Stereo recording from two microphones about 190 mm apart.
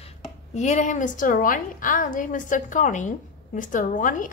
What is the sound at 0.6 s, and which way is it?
A woman's voice, 40° left (ahead or behind).